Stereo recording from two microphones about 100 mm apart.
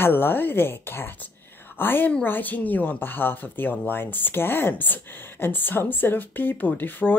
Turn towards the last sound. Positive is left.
turn(degrees=20)  # may be behind; listen again after turning